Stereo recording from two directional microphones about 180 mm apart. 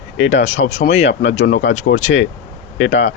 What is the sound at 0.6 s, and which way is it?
Speech, 60° left (ahead or behind).